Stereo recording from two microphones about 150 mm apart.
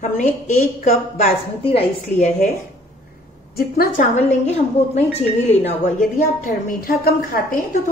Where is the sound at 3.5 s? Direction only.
90° left.